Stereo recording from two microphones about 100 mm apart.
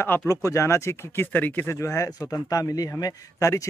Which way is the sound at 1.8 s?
30° left (ahead or behind).